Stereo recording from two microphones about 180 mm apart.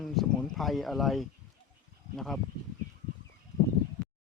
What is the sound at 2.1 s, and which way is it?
Speech, centre (ahead or behind).